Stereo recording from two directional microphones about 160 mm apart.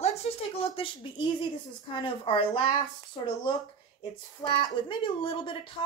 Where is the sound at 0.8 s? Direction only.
35° left (ahead or behind).